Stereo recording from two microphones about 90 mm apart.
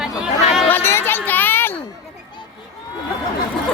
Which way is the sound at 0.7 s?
25° left (ahead or behind).